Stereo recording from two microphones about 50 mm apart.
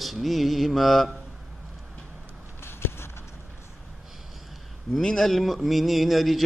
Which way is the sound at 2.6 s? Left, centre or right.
Left.